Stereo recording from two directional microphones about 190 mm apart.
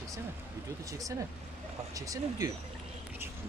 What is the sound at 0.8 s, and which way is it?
Speech, 15° right (ahead or behind).